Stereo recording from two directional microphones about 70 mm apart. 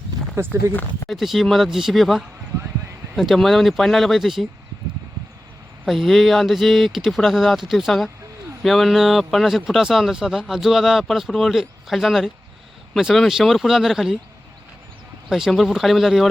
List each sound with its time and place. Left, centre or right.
0.4 s speech: right
0.7 s speech: left
1.0 s speech: centre
5.8 s speech: centre
15.3 s speech: centre